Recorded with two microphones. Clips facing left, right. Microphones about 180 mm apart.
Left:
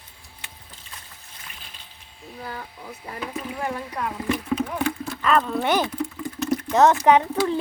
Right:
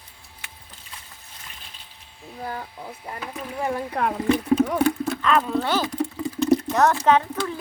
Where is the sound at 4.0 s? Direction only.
70° right (ahead or behind).